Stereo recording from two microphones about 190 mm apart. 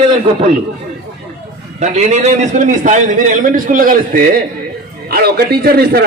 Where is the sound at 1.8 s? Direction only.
35° right (ahead or behind).